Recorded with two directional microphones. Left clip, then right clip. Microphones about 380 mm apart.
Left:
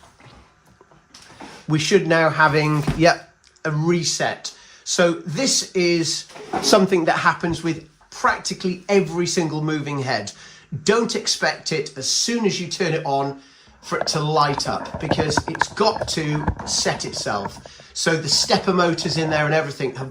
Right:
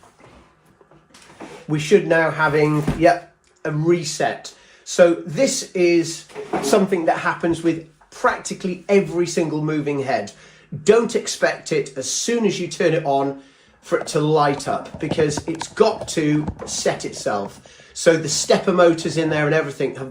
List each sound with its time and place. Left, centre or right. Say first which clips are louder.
1.6 s speech: right 2 dB; left
15.7 s speech: right 5 dB; centre